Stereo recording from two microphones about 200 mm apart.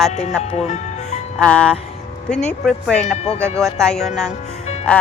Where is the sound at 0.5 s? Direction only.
35° left (ahead or behind).